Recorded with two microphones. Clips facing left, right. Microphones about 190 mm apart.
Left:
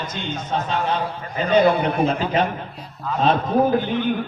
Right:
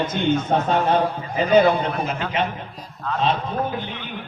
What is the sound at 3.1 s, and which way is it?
Speech, 5° left (ahead or behind).